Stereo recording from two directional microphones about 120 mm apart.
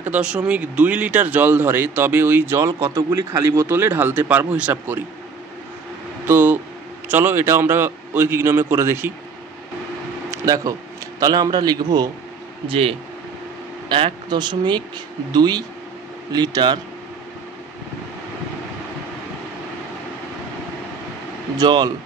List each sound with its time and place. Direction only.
0.0 s a man's voice: 10° right (ahead or behind)
6.2 s a man's voice: 15° right (ahead or behind)
10.3 s a man's voice: 30° right (ahead or behind)
12.6 s speech: 55° right (ahead or behind); by 16.8 s 35° right (ahead or behind)
21.5 s speech: 35° right (ahead or behind)